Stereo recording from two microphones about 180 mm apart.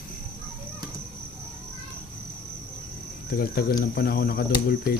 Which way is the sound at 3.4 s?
55° left (ahead or behind).